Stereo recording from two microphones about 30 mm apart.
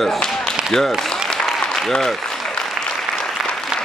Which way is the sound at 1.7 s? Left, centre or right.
Centre.